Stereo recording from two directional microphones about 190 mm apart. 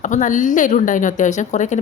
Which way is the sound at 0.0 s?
40° left (ahead or behind).